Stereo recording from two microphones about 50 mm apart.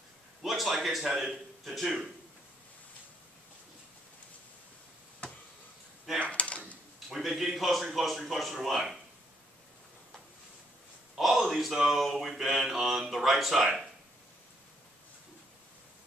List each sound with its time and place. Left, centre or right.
0.4 s a man's voice: centre
6.1 s drawer open or close: left
7.2 s mantra: centre
11.1 s mantra: centre